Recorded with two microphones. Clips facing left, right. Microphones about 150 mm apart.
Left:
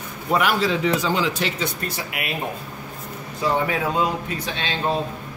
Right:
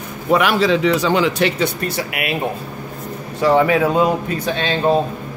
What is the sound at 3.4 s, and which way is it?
Speech, 80° right.